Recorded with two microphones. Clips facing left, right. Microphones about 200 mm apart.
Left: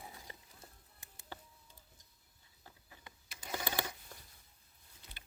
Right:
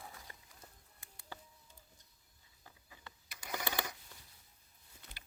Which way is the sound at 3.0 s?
25° left (ahead or behind).